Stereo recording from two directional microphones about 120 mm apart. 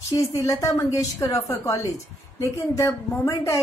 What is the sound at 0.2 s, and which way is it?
A woman's voice, 30° left (ahead or behind).